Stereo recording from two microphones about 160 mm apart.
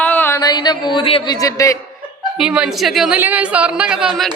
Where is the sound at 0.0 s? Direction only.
10° left (ahead or behind).